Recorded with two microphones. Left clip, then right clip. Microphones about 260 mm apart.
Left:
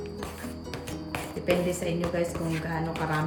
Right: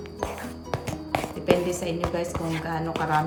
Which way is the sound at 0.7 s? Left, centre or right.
Centre.